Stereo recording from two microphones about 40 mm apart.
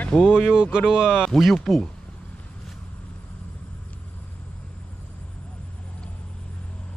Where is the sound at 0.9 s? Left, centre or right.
Centre.